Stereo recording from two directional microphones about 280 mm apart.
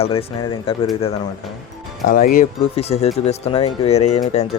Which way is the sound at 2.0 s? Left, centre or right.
Left.